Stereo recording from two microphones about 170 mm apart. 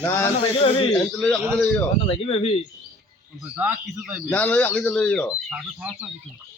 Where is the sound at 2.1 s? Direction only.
35° left (ahead or behind).